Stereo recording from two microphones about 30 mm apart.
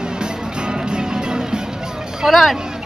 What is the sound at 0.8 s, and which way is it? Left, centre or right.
Music, right.